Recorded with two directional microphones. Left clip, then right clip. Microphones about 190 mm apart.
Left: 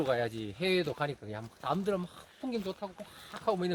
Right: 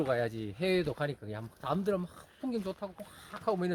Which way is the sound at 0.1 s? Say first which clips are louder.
Even; 35° right (ahead or behind).